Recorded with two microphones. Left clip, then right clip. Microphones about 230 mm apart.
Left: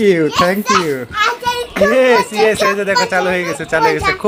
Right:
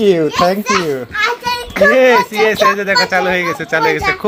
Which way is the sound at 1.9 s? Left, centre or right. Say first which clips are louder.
Even; centre.